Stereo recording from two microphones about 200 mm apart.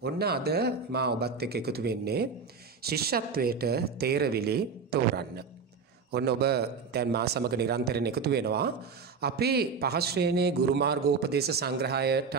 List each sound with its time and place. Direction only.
0.0 s a man's voice: 50° right (ahead or behind)